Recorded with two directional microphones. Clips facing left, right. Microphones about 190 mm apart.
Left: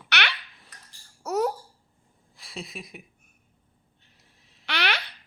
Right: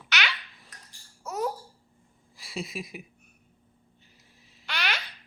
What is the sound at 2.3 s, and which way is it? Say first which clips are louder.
Speech: right 3 dB; centre (ahead or behind).